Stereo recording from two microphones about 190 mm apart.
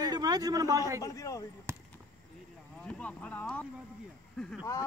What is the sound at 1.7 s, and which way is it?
Basketball bounce, 15° right (ahead or behind).